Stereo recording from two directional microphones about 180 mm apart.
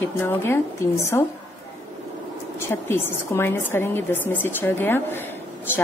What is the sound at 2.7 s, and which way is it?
A woman's voice, 15° left (ahead or behind).